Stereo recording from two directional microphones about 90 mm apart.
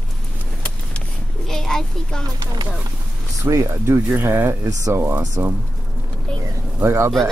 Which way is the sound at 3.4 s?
35° right (ahead or behind).